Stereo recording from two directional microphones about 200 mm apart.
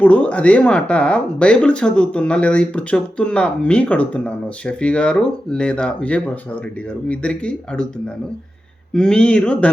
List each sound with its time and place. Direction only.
0.0 s speech: 5° left (ahead or behind)
8.9 s speech: 5° left (ahead or behind)